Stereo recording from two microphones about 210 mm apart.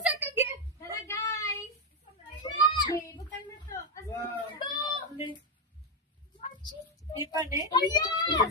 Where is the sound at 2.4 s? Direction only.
20° left (ahead or behind).